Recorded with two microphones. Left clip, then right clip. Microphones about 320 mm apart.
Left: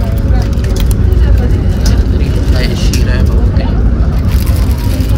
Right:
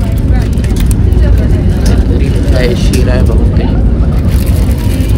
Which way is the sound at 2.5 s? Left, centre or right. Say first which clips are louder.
Right 6 dB; centre.